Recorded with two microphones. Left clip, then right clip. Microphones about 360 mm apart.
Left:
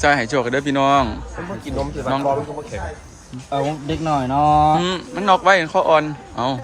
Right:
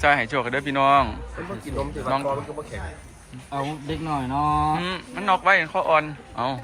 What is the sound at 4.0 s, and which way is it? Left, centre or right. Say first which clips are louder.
Speech: left 7 dB; centre.